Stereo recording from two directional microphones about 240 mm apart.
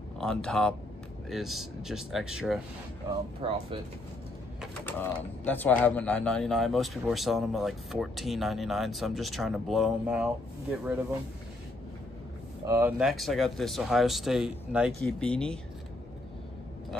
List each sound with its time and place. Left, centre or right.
0.2 s speech: centre
3.4 s speech: right
4.8 s speech: centre
12.6 s speech: centre